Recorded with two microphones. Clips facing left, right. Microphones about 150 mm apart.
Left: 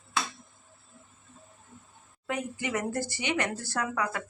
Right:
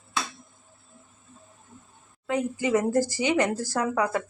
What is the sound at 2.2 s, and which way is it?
Speech, 25° right (ahead or behind).